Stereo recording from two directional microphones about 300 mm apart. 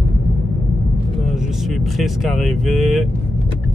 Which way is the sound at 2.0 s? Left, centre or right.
Centre.